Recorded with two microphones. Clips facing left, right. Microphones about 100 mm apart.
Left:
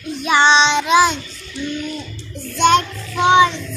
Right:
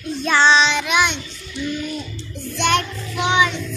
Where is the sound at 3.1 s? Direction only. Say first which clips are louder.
Left 6 dB; 30° left (ahead or behind).